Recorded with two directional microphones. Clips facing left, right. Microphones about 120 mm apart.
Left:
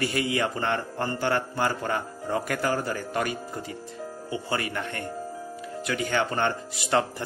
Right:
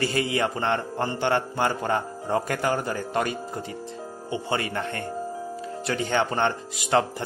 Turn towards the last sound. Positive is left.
turn(degrees=-20)  # may be behind; listen again after turning